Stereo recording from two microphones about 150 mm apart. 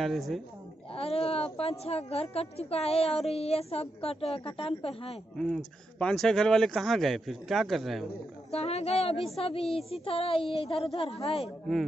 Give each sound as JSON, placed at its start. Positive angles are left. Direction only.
{"t": 0.0, "sound": "a man's voice", "side_deg": 0}
{"t": 0.9, "sound": "a woman's voice", "side_deg": 40}
{"t": 5.9, "sound": "a man's voice", "side_deg": 5}
{"t": 8.5, "sound": "a woman's voice", "side_deg": 45}